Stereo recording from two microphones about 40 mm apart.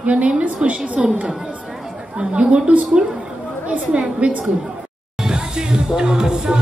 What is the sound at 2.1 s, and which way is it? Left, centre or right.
Speech, right.